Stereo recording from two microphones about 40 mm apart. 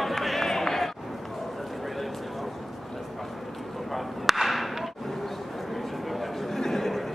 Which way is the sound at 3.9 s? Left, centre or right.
Centre.